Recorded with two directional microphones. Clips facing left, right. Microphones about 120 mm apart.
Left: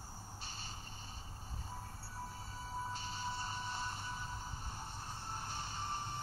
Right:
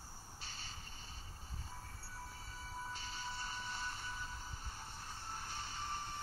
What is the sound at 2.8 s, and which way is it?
Train, 30° left (ahead or behind).